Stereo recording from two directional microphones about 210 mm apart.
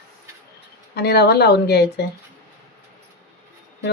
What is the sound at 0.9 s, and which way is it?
Speech, 50° left (ahead or behind).